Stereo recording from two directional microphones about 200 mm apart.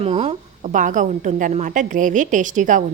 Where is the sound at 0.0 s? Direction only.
30° right (ahead or behind).